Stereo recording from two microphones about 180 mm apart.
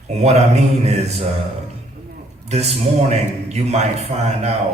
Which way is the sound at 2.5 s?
35° right (ahead or behind).